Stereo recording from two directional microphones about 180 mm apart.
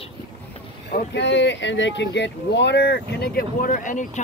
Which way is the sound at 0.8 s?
65° left (ahead or behind).